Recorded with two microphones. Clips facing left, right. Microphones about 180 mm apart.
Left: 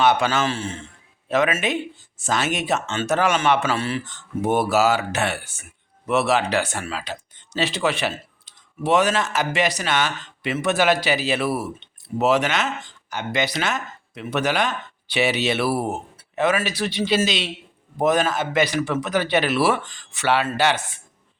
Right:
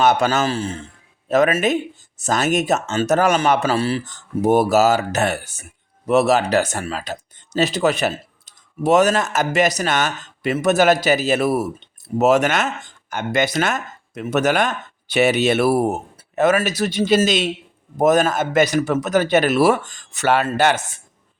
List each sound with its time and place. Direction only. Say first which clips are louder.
0.0 s a man's voice: right 2 dB; 45° right (ahead or behind)